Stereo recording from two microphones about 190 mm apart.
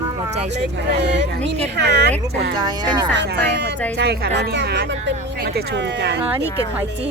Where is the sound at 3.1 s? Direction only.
65° right (ahead or behind).